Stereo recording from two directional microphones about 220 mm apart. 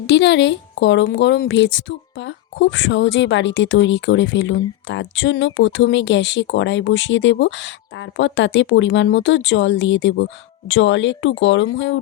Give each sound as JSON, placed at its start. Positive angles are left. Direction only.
{"t": 0.1, "sound": "speech", "side_deg": 55}